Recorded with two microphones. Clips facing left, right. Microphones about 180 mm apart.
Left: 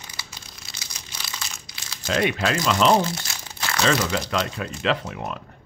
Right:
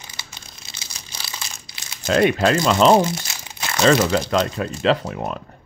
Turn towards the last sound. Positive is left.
turn(degrees=-35)  # may be behind; listen again after turning